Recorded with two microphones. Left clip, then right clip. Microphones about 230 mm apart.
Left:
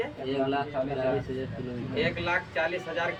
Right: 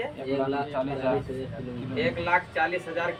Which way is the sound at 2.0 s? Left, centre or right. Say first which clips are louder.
Right 3 dB; centre.